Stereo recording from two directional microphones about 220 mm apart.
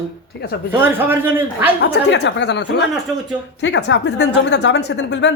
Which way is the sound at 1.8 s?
50° left (ahead or behind).